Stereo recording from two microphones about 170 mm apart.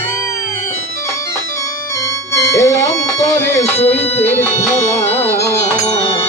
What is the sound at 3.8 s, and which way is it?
Speech, 35° left (ahead or behind).